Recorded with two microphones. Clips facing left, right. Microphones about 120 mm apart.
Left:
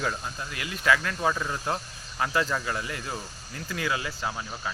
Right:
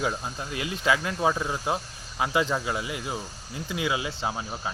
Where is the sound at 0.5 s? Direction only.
20° right (ahead or behind).